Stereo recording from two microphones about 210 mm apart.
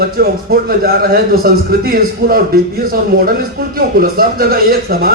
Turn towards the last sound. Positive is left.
turn(degrees=-45)  # may be behind; listen again after turning